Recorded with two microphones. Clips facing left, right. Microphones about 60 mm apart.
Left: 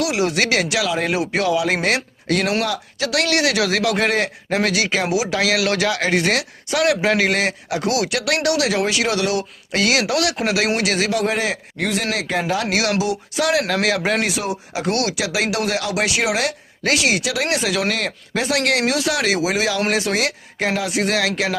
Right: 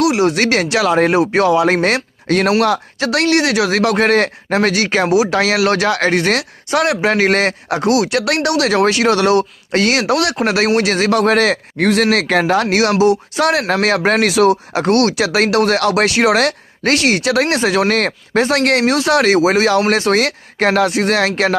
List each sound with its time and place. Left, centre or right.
0.0 s speech: right
2.6 s speech: right
3.0 s speech: right
7.8 s speech: right
12.1 s speech: right
13.0 s speech: right
14.2 s speech: right
14.7 s speech: right